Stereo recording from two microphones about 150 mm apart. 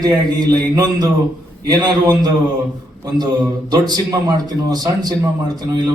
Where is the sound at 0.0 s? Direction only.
25° right (ahead or behind).